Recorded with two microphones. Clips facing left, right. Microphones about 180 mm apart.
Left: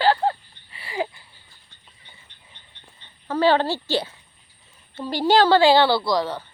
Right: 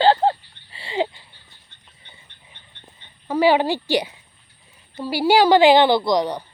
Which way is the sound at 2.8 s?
10° right (ahead or behind).